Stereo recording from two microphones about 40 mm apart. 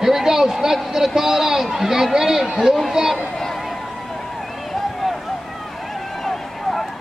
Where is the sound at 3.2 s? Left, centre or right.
Centre.